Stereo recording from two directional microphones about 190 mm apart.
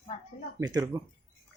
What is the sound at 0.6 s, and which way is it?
Speech, 20° right (ahead or behind).